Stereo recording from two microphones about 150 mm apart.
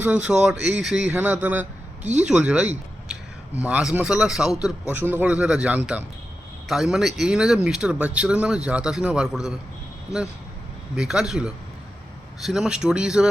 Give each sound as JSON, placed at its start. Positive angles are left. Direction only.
{"t": 0.0, "sound": "a man's voice", "side_deg": -5}
{"t": 2.2, "sound": "a sound", "side_deg": -5}
{"t": 3.7, "sound": "a man's voice", "side_deg": -10}
{"t": 10.9, "sound": "speech", "side_deg": -5}